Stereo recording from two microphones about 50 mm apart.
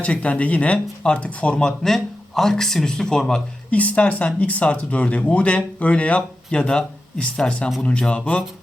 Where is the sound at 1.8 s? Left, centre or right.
Centre.